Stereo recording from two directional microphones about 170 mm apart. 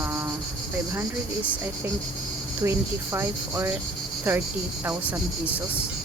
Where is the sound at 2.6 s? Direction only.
15° right (ahead or behind).